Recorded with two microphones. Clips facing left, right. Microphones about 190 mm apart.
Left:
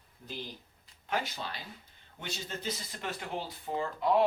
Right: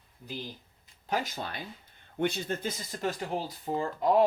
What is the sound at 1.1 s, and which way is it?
Speech, 45° right (ahead or behind).